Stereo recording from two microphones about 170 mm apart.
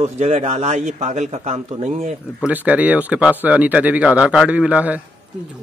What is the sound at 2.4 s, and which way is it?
Speech, 10° right (ahead or behind).